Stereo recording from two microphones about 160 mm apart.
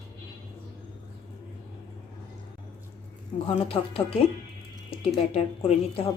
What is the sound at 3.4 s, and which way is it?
Speech, 35° left (ahead or behind).